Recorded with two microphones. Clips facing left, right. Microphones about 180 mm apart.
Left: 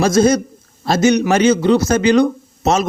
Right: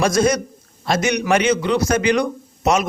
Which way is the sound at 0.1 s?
25° left (ahead or behind).